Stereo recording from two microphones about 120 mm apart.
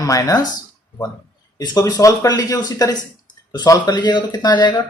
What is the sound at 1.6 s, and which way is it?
Speech, 30° left (ahead or behind).